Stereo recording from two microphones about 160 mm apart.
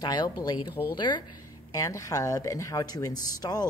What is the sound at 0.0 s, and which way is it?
Speech, 25° left (ahead or behind).